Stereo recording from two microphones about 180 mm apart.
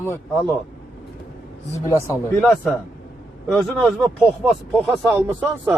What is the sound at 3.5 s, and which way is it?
Speech, centre (ahead or behind).